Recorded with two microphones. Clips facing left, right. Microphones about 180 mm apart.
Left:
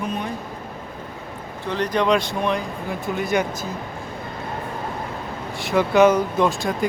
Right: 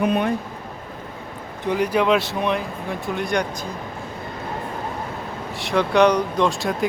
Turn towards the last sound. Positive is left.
turn(degrees=0)  # may be behind; listen again after turning